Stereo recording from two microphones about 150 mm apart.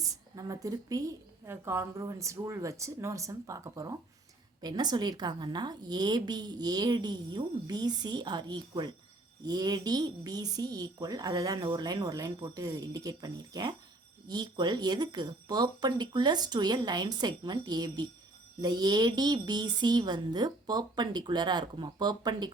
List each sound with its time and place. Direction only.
0.3 s a woman's voice: 25° right (ahead or behind)